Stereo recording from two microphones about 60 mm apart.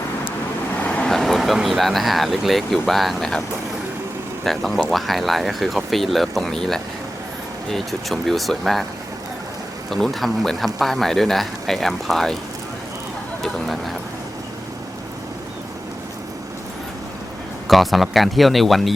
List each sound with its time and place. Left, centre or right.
0.8 s vehicle: left
1.0 s vehicle: centre
1.6 s speech: centre
4.4 s speech: centre
9.9 s speech: centre
13.4 s speech: centre
17.7 s speech: centre